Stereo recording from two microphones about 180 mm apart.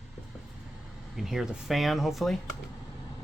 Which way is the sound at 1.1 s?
Centre (ahead or behind).